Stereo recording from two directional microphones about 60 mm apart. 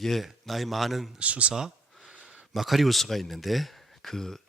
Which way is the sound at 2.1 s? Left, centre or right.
Centre.